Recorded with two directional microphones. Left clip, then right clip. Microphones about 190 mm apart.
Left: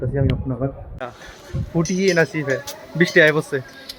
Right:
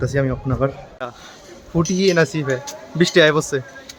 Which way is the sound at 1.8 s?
15° right (ahead or behind).